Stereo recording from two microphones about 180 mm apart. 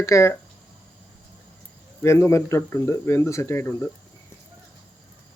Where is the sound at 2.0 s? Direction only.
15° left (ahead or behind).